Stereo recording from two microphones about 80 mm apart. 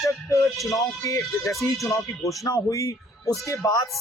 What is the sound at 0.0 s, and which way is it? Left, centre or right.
Music, left.